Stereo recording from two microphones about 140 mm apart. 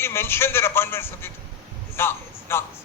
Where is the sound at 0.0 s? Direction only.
15° left (ahead or behind).